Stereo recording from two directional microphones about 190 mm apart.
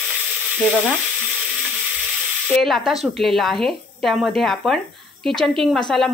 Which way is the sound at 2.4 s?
Centre (ahead or behind).